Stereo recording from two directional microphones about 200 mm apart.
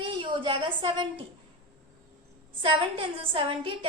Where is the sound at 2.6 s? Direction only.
25° right (ahead or behind).